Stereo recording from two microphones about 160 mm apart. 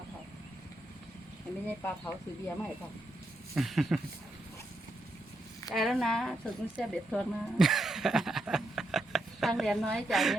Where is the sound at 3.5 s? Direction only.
Centre (ahead or behind).